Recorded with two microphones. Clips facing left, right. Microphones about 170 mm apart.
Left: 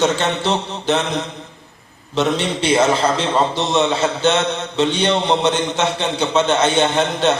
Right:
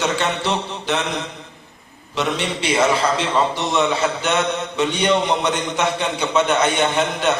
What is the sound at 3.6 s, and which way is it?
A man's voice, 25° left (ahead or behind).